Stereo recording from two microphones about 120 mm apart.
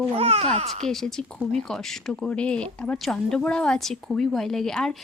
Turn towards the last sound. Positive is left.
turn(degrees=5)  # may be behind; listen again after turning